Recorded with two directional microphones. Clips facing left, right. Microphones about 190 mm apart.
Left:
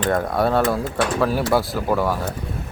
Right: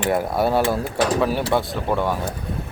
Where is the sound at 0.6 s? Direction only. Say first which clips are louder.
Even; 30° right (ahead or behind).